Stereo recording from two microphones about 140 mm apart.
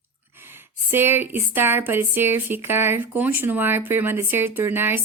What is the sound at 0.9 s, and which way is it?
A woman's voice, 15° right (ahead or behind).